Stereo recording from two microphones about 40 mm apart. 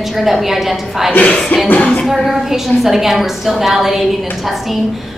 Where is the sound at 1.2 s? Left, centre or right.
Left.